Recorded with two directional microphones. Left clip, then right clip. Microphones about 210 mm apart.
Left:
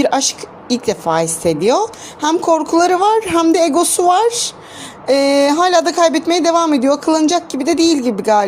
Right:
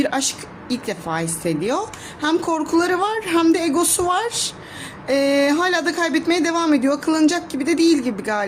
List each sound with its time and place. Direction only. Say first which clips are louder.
0.0 s speech: left 7 dB; 20° left (ahead or behind)